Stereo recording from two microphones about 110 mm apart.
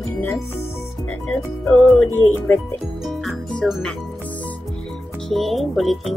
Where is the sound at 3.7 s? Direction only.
5° left (ahead or behind).